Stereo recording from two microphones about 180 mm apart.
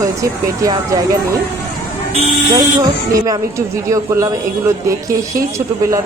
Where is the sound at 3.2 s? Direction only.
20° right (ahead or behind).